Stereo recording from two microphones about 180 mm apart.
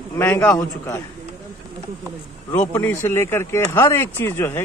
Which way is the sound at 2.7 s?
10° left (ahead or behind).